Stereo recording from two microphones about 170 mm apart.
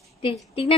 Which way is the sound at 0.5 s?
35° left (ahead or behind).